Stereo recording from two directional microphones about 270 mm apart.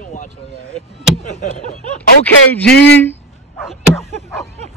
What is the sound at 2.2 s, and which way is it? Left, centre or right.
Speech, centre.